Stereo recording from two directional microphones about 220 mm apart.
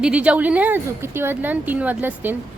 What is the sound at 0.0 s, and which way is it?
Speech, 5° right (ahead or behind).